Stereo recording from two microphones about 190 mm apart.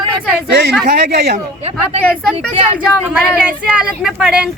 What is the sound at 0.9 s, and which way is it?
Speech, 55° right (ahead or behind).